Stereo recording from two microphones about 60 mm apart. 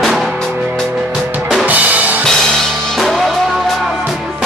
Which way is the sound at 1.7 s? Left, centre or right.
Right.